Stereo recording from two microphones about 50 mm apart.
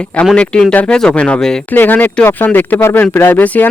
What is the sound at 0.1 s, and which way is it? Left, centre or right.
Speech, left.